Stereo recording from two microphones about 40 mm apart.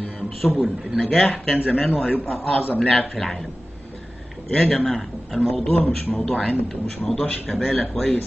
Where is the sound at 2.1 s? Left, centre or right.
Left.